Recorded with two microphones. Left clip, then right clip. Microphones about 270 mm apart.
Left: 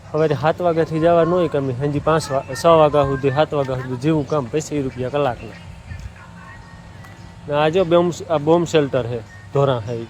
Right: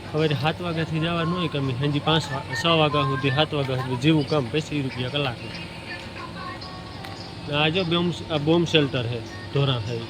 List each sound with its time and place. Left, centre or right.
0.2 s speech: centre
7.5 s speech: centre